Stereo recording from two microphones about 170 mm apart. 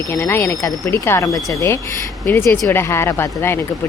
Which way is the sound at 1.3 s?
Centre (ahead or behind).